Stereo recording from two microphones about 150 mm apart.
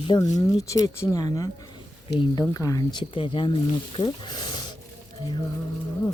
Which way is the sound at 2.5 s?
20° left (ahead or behind).